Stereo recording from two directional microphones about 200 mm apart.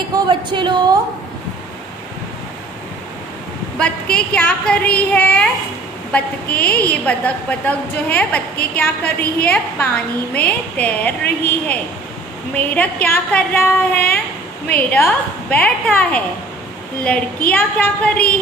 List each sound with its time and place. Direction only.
0.1 s speech: 25° right (ahead or behind)
3.7 s a woman's voice: 5° left (ahead or behind)